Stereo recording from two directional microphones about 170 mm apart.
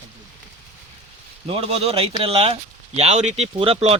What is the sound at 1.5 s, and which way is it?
Speech, 35° right (ahead or behind).